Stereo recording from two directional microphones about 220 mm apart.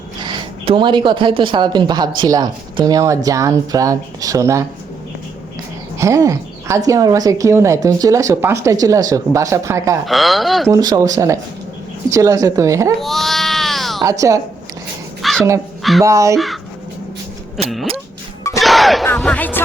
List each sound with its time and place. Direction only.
0.2 s a woman's voice: 20° right (ahead or behind)
6.0 s a woman's voice: 15° right (ahead or behind)
10.1 s speech: centre (ahead or behind)
10.7 s a woman's voice: 15° right (ahead or behind)
13.0 s baby cry: centre (ahead or behind)
14.0 s a woman's voice: 15° right (ahead or behind)
15.2 s crow: centre (ahead or behind)
15.8 s a sound: centre (ahead or behind)
16.0 s a woman's voice: 15° right (ahead or behind)
18.6 s a sound: centre (ahead or behind)